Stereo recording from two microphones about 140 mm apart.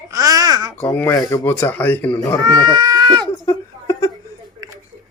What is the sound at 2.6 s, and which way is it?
Speech, 30° right (ahead or behind).